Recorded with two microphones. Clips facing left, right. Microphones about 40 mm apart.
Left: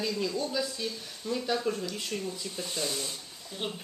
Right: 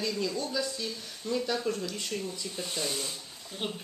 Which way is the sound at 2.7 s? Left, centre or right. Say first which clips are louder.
Even; right.